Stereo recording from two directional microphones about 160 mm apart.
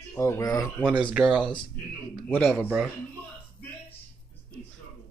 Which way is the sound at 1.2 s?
10° right (ahead or behind).